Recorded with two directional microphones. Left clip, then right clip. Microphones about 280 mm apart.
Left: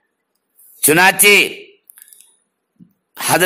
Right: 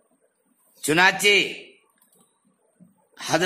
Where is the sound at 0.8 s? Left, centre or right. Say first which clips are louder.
Left 7 dB; left.